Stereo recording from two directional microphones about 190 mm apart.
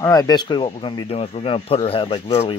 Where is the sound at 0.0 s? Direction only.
20° left (ahead or behind).